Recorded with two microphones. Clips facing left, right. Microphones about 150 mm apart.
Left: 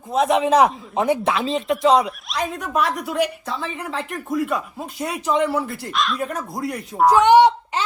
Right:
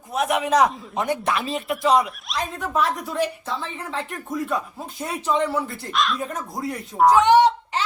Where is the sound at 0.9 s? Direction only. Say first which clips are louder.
Left 5 dB; 90° left.